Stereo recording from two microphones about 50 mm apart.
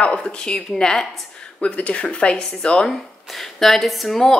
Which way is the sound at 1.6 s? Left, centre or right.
Left.